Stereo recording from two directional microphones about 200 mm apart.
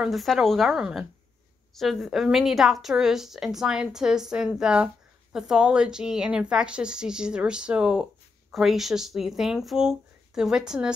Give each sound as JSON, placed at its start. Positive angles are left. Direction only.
{"t": 0.0, "sound": "a woman's voice", "side_deg": 0}